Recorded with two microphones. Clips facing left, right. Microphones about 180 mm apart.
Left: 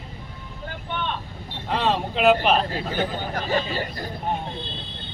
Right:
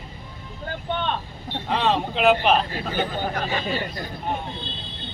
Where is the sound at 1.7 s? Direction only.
Centre (ahead or behind).